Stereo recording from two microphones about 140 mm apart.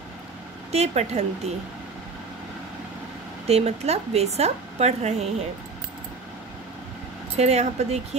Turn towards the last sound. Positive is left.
turn(degrees=-50)  # may be behind; listen again after turning